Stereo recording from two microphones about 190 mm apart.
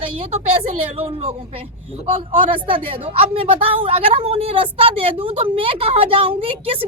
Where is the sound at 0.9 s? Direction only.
30° right (ahead or behind).